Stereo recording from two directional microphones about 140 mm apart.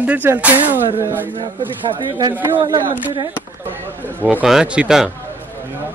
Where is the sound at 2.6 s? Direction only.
30° right (ahead or behind).